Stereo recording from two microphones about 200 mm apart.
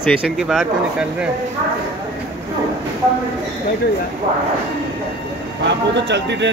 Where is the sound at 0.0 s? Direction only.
Centre (ahead or behind).